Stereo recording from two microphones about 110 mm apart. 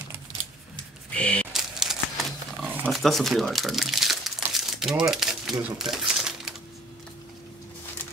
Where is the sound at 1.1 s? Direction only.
10° left (ahead or behind).